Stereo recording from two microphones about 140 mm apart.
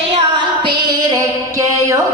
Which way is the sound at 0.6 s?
35° right (ahead or behind).